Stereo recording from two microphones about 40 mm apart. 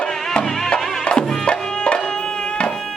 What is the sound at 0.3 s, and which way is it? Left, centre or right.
Music, left.